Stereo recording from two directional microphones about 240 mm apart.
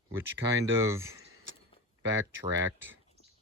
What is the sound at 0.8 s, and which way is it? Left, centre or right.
Speech, centre.